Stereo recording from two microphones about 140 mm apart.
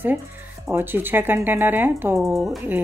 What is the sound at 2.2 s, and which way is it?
Speech, centre (ahead or behind).